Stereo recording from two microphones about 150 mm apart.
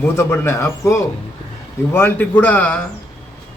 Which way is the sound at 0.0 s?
15° left (ahead or behind).